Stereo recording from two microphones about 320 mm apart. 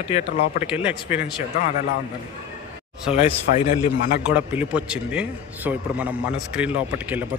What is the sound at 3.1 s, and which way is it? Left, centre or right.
Speech, centre.